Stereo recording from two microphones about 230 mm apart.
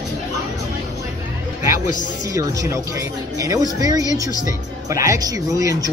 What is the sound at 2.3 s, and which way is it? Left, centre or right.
Speech, centre.